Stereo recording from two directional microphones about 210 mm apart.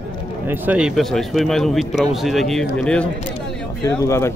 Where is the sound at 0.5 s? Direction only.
5° right (ahead or behind).